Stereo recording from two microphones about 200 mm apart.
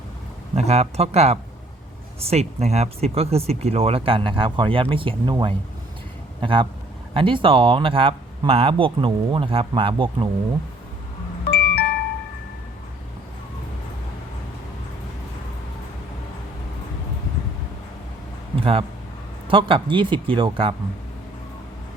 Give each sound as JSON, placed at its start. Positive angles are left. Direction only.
{"t": 0.5, "sound": "speech", "side_deg": -35}
{"t": 11.5, "sound": "music", "side_deg": 55}
{"t": 18.5, "sound": "speech", "side_deg": -30}